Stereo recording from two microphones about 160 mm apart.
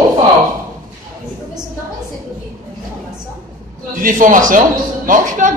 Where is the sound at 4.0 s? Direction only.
55° right (ahead or behind).